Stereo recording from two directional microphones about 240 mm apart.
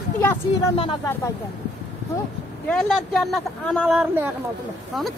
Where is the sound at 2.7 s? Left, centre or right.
Centre.